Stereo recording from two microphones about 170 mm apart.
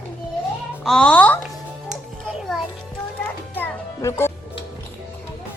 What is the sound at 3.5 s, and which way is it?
Music, 15° left (ahead or behind).